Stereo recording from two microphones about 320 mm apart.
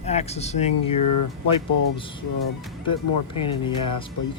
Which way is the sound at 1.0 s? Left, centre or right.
Left.